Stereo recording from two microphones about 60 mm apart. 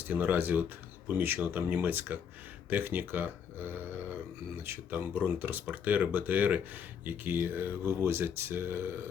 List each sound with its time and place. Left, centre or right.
0.1 s speech: right